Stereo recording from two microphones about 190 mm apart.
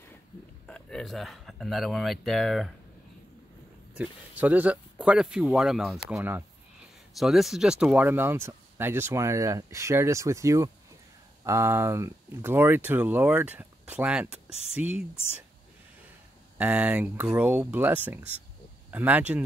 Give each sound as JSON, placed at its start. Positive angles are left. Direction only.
{"t": 0.7, "sound": "speech", "side_deg": 5}
{"t": 4.0, "sound": "speech", "side_deg": -10}
{"t": 14.5, "sound": "speech", "side_deg": 35}
{"t": 14.8, "sound": "speech", "side_deg": -5}
{"t": 16.5, "sound": "speech", "side_deg": -5}